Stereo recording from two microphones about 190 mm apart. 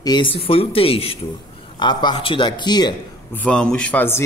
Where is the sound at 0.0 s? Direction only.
25° left (ahead or behind).